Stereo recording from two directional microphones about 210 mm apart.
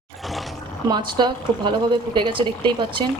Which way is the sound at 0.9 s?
20° right (ahead or behind).